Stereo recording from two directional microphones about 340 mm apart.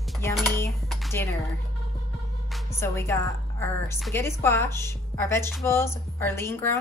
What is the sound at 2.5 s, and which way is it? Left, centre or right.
A woman's voice, centre.